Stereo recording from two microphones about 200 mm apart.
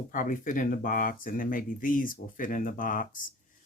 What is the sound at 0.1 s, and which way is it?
Speech, 40° left (ahead or behind).